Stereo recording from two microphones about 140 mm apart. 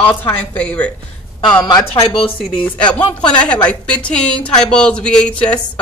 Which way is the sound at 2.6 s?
10° left (ahead or behind).